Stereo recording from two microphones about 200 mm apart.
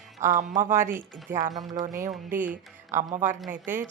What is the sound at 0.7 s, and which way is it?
Speech, 10° right (ahead or behind).